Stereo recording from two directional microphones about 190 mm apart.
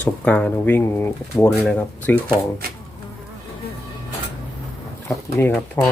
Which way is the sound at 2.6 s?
50° right (ahead or behind).